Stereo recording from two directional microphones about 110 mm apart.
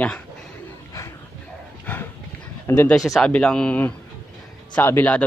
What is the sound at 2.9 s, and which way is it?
A man's voice, 5° left (ahead or behind).